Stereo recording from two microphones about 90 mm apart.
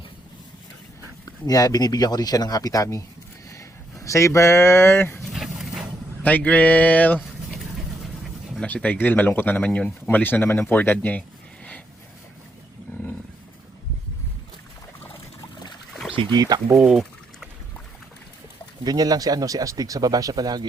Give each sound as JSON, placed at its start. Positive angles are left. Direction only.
{"t": 1.2, "sound": "speech", "side_deg": 40}
{"t": 5.2, "sound": "dog", "side_deg": -5}
{"t": 6.2, "sound": "a sound", "side_deg": 15}
{"t": 8.6, "sound": "speech", "side_deg": 15}
{"t": 16.3, "sound": "speech", "side_deg": -50}
{"t": 16.7, "sound": "a sound", "side_deg": -5}
{"t": 18.9, "sound": "speech", "side_deg": -45}